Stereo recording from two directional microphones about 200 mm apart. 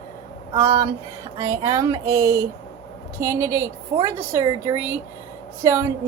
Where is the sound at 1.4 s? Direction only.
15° right (ahead or behind).